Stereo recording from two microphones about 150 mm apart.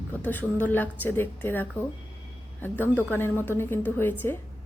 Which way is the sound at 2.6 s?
10° left (ahead or behind).